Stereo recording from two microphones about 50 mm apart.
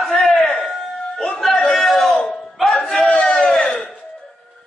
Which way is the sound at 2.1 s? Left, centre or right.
Centre.